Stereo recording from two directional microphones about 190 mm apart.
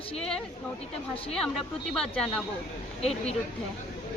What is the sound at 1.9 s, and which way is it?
Speech, 5° left (ahead or behind).